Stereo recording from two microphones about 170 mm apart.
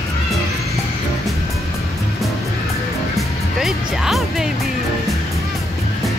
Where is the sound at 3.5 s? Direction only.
Centre (ahead or behind).